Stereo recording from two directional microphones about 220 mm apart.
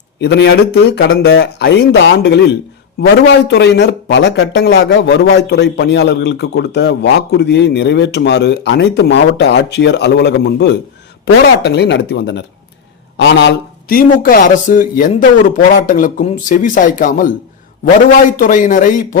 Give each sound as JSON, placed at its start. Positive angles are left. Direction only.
{"t": 0.2, "sound": "speech", "side_deg": 50}